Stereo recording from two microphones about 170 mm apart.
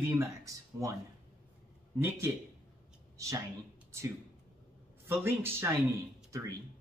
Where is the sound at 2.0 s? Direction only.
15° right (ahead or behind).